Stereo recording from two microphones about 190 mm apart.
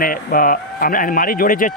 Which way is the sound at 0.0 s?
50° left (ahead or behind).